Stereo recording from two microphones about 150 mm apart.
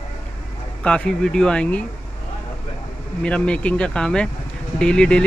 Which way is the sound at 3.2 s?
5° left (ahead or behind).